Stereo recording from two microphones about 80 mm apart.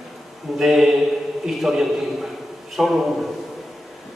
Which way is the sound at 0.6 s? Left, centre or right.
Centre.